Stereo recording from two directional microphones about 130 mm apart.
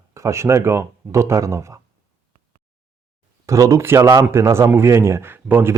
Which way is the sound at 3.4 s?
25° right (ahead or behind).